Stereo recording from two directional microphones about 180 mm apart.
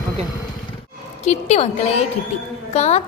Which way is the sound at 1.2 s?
35° left (ahead or behind).